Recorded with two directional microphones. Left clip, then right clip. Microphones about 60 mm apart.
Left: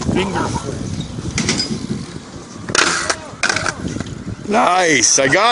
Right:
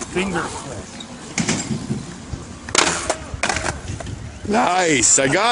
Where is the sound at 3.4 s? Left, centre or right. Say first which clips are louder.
Left 5 dB; centre.